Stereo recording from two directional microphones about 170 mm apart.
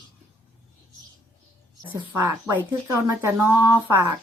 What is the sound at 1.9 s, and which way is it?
Speech, 15° right (ahead or behind).